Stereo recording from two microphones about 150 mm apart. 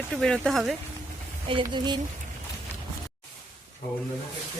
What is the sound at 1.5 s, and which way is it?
Speech, 35° right (ahead or behind).